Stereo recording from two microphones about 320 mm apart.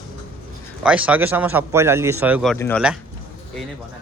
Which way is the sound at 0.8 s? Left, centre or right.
Centre.